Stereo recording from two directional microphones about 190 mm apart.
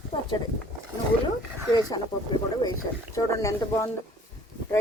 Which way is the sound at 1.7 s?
20° left (ahead or behind).